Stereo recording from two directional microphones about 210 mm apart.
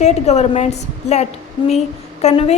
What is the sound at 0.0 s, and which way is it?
A woman's voice, 30° left (ahead or behind).